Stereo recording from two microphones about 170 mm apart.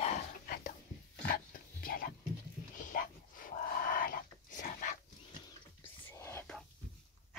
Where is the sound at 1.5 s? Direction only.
55° left (ahead or behind).